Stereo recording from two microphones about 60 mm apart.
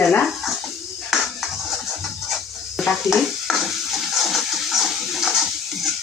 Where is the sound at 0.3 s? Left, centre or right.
Centre.